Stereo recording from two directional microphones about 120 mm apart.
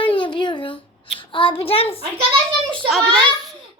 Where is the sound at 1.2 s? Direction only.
45° left (ahead or behind).